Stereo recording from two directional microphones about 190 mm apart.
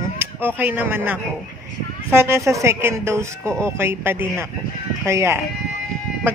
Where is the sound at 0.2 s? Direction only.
10° right (ahead or behind).